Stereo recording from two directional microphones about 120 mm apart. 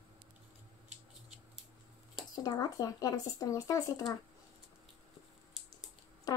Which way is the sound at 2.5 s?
30° left (ahead or behind).